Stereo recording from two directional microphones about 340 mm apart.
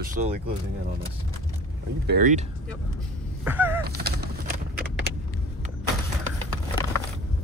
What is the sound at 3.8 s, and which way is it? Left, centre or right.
Bird, right.